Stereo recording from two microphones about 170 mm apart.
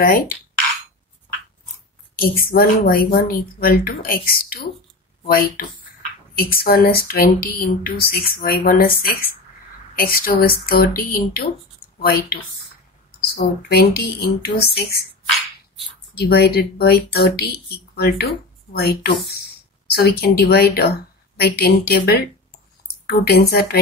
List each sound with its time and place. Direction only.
0.0 s speech: 55° left (ahead or behind)
2.1 s speech: 60° left (ahead or behind)
16.2 s speech: 70° left (ahead or behind)